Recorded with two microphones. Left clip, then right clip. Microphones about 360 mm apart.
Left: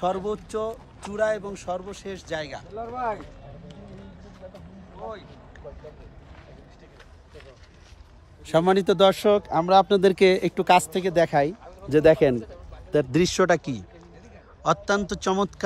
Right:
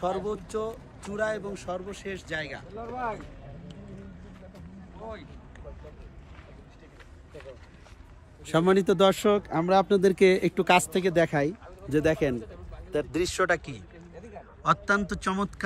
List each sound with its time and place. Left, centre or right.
0.0 s speech: left
2.8 s speech: left
8.5 s speech: centre
14.6 s a man's voice: centre